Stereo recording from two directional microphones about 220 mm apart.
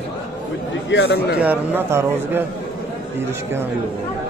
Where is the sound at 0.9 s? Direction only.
50° left (ahead or behind).